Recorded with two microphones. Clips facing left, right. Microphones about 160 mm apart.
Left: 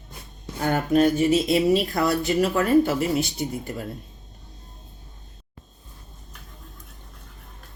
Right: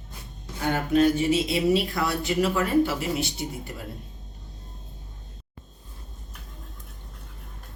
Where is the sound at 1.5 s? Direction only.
45° left (ahead or behind).